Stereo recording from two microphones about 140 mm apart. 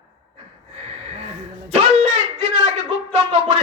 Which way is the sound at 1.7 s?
50° right (ahead or behind).